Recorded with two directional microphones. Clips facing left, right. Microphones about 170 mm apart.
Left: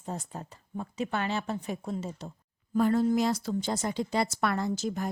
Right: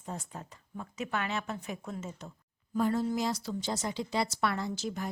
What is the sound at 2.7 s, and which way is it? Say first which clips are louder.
A woman's voice: left 5 dB; 65° left (ahead or behind).